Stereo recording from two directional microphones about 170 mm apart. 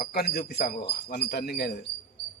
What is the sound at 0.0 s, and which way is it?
Speech, 65° left (ahead or behind).